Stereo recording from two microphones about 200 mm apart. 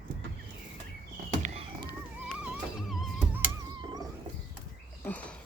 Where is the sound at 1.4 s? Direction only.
30° right (ahead or behind).